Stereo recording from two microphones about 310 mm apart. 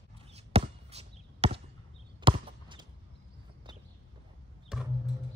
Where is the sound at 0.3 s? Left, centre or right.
Centre.